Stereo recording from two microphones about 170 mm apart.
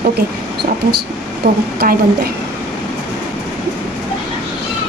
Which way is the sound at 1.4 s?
55° right (ahead or behind).